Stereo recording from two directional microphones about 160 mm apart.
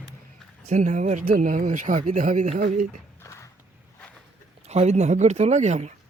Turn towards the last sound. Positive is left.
turn(degrees=-45)  # may be behind; listen again after turning